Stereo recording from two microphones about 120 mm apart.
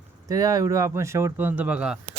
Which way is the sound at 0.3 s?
30° right (ahead or behind).